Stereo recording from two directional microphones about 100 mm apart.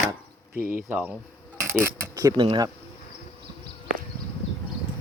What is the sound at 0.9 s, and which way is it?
Speech, 15° right (ahead or behind).